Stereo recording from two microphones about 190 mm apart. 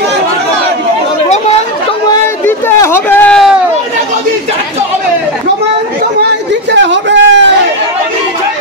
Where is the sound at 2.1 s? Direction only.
15° left (ahead or behind).